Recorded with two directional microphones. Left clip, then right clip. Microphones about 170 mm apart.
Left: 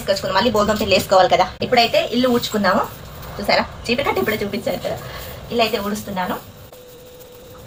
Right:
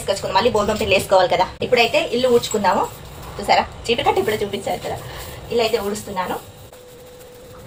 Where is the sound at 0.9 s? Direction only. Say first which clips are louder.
Left 1 dB; 5° right (ahead or behind).